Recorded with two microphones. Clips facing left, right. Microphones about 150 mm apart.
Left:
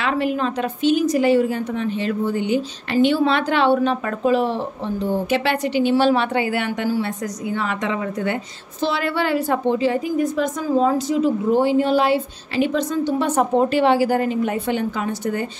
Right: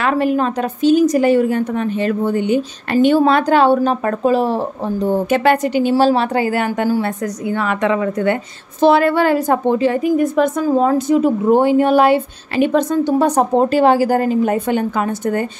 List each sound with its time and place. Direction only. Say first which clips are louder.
0.0 s a woman's voice: right 5 dB; 45° right (ahead or behind)
7.5 s a woman's voice: right 7 dB; 60° right (ahead or behind)